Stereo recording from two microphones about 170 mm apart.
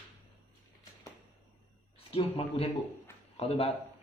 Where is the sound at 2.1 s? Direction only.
35° left (ahead or behind).